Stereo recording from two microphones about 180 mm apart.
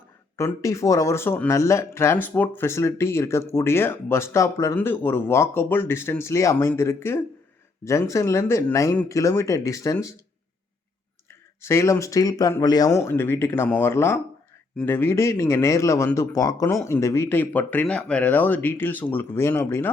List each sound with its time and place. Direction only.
0.3 s speech: 15° left (ahead or behind)
11.3 s speech: 15° left (ahead or behind)